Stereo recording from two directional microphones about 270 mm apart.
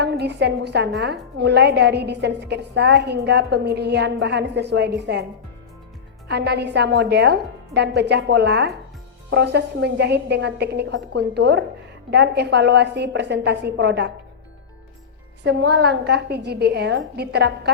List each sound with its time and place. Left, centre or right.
0.0 s a woman's voice: right
6.2 s a woman's voice: right
15.4 s a woman's voice: right